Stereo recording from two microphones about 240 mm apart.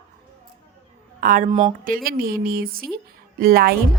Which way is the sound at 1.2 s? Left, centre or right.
Right.